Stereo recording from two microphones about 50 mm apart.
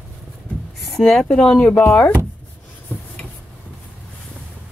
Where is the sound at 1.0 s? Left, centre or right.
Centre; by 2.0 s left.